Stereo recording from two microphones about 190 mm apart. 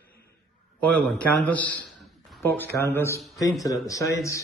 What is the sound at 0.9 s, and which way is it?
A man's voice, 10° left (ahead or behind).